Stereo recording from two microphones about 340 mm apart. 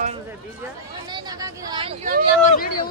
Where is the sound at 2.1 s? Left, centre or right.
Right.